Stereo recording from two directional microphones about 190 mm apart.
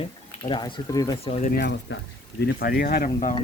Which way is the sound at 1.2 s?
30° left (ahead or behind).